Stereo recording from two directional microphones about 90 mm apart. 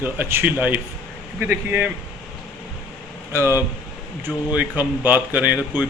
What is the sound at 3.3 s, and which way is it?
Speech, 30° right (ahead or behind).